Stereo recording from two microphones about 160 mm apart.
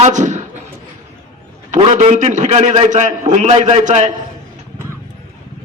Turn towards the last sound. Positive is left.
turn(degrees=-45)  # may be behind; listen again after turning